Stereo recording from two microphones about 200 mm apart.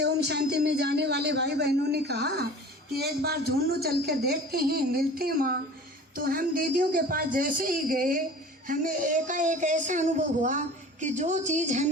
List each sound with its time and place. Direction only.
0.0 s a man's voice: 55° right (ahead or behind); by 11.9 s 40° right (ahead or behind)